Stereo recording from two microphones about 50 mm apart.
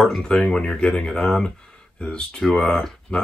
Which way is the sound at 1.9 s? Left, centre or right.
Centre.